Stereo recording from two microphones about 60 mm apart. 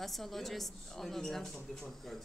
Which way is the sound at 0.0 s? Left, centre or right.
Centre.